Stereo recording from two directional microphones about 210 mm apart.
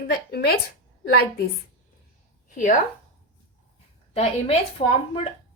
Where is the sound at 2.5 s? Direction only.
40° left (ahead or behind).